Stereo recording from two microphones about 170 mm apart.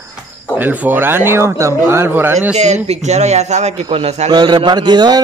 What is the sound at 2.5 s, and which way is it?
A man's voice, 40° right (ahead or behind).